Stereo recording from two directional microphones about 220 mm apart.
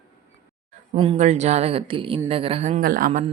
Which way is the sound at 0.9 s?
25° right (ahead or behind).